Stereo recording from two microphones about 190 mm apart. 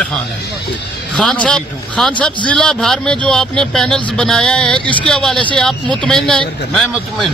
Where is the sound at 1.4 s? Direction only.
5° left (ahead or behind).